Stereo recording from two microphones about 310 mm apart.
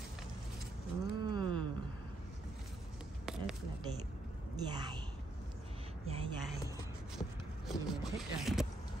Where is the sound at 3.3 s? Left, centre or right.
Centre.